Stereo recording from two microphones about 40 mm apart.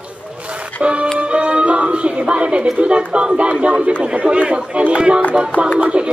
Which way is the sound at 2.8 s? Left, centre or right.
Right.